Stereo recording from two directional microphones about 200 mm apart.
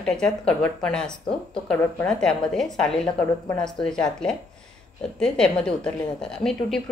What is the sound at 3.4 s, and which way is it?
Speech, 20° left (ahead or behind).